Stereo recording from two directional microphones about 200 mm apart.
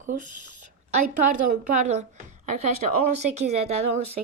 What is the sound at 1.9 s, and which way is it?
Speech, 35° right (ahead or behind).